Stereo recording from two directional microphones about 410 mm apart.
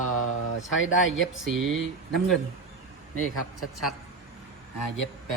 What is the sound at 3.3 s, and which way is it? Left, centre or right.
Speech, left.